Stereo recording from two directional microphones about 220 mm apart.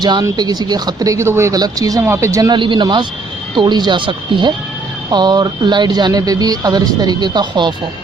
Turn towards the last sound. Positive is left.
turn(degrees=-20)  # may be behind; listen again after turning